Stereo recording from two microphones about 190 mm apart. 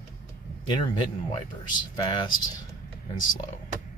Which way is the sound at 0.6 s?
25° left (ahead or behind).